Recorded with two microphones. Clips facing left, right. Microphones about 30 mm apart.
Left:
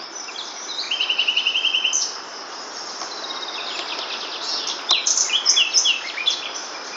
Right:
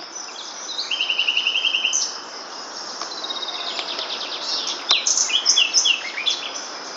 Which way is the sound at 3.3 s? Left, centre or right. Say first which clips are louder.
Right 2 dB; centre.